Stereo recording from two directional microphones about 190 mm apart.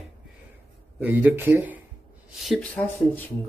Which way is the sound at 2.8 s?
10° left (ahead or behind).